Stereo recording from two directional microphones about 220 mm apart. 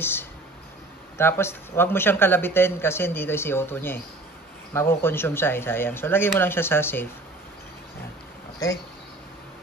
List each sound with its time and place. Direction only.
0.0 s speech: 10° left (ahead or behind)